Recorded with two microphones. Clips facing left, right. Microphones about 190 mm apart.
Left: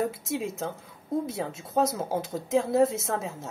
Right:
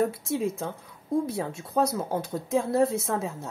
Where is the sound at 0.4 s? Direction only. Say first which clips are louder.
Right 3 dB; centre (ahead or behind).